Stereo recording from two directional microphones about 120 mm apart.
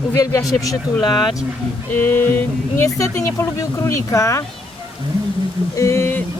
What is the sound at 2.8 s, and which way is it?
Speech, 25° left (ahead or behind).